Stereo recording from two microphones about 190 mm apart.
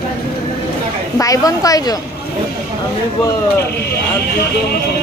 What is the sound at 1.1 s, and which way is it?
Speech, 20° left (ahead or behind).